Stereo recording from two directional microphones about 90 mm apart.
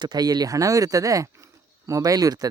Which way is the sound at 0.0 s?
50° right (ahead or behind).